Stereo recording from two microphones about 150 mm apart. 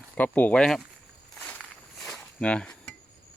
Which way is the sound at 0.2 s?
10° left (ahead or behind).